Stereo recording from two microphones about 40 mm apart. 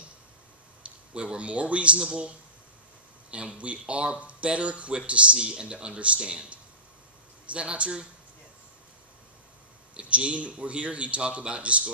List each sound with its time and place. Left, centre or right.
1.1 s speech: right
3.5 s speech: right
9.9 s speech: right